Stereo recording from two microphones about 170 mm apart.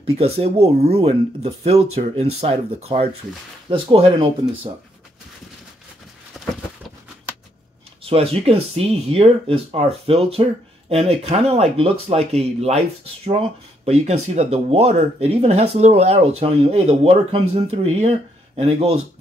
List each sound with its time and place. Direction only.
0.2 s speech: 35° right (ahead or behind)
6.4 s a sound: centre (ahead or behind)
8.0 s speech: 35° right (ahead or behind)